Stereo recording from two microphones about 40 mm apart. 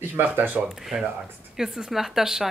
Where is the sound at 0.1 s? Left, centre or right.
Right.